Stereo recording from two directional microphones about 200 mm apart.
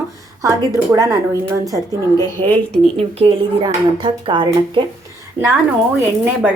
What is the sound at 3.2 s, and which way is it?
Speech, 25° right (ahead or behind).